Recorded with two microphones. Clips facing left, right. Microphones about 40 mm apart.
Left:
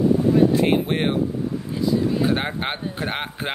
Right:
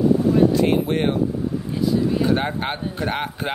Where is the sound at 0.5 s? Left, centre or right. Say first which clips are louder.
Even; left.